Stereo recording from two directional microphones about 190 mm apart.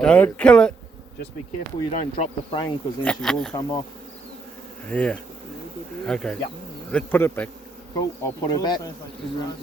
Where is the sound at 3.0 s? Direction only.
5° left (ahead or behind).